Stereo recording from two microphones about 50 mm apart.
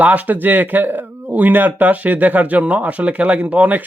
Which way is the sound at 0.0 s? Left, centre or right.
Right.